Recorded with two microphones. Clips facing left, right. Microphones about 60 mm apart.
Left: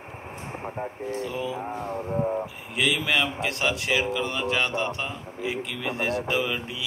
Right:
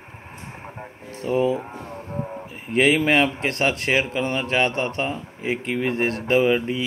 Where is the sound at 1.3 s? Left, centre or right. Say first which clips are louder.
Right 10 dB; right.